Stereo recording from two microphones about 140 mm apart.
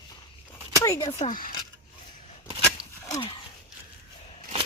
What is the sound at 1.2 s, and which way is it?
Speech, 70° left (ahead or behind).